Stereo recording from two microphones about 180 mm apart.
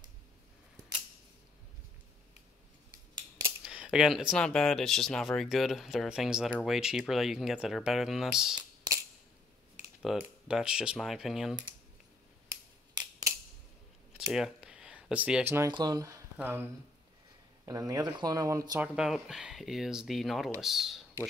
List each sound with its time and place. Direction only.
3.6 s speech: 5° right (ahead or behind)
8.5 s a sound: 20° right (ahead or behind)
10.0 s speech: 5° right (ahead or behind)
14.1 s a sound: 5° right (ahead or behind)
15.7 s speech: 20° right (ahead or behind)
17.6 s speech: 20° right (ahead or behind)
18.9 s speech: centre (ahead or behind)